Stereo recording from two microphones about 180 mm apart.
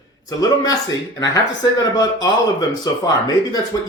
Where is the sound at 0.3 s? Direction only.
20° left (ahead or behind).